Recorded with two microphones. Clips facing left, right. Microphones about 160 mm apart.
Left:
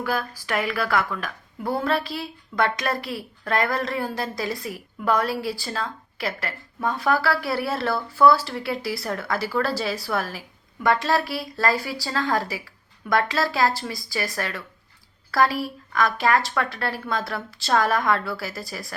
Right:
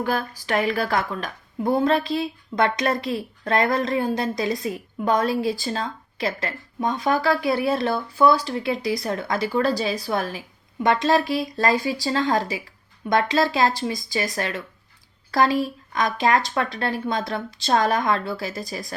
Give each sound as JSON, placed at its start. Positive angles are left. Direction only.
{"t": 0.0, "sound": "a woman's voice", "side_deg": -25}